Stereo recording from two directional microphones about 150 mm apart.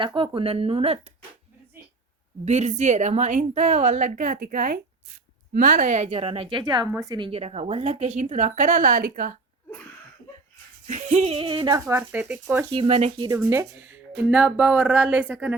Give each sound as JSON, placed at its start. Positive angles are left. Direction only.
{"t": 0.0, "sound": "a woman's voice", "side_deg": -35}
{"t": 2.4, "sound": "a woman's voice", "side_deg": -50}
{"t": 7.3, "sound": "a woman's voice", "side_deg": -40}
{"t": 10.8, "sound": "a woman's voice", "side_deg": -50}
{"t": 11.7, "sound": "speech", "side_deg": -15}
{"t": 12.7, "sound": "a woman's voice", "side_deg": -40}
{"t": 13.1, "sound": "a woman's voice", "side_deg": -25}
{"t": 13.4, "sound": "speech", "side_deg": -15}